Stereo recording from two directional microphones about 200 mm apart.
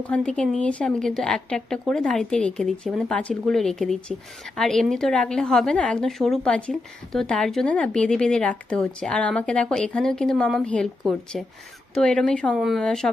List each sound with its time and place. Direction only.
0.0 s a woman's voice: 5° left (ahead or behind)